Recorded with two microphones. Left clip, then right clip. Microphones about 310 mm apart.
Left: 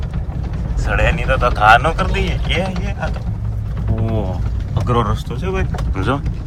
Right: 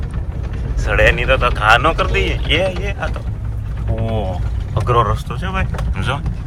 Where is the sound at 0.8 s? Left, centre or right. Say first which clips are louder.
Right 5 dB; centre.